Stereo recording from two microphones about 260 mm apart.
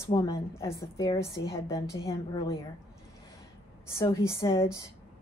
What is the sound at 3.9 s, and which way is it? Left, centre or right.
Speech, centre.